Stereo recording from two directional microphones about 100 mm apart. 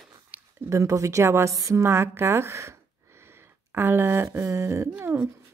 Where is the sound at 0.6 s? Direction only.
30° right (ahead or behind).